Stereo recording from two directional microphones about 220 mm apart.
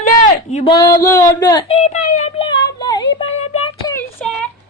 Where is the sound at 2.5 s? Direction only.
20° left (ahead or behind).